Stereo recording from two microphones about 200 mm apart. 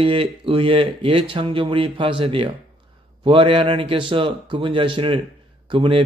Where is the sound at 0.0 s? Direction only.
25° right (ahead or behind).